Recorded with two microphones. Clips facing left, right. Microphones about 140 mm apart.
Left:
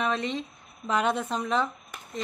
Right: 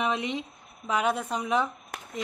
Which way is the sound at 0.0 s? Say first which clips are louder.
Even; 15° right (ahead or behind).